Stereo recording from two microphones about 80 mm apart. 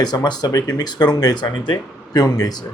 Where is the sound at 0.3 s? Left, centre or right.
Left.